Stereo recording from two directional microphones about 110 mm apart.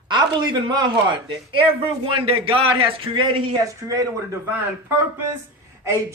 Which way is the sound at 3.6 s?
30° right (ahead or behind).